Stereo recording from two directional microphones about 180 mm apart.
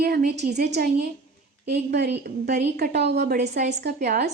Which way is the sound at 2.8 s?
65° right (ahead or behind).